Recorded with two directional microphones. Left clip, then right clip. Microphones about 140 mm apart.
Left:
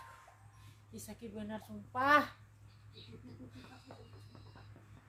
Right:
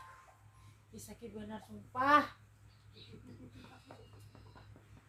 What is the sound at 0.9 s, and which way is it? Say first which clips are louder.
A child's voice: left 1 dB; 60° left (ahead or behind).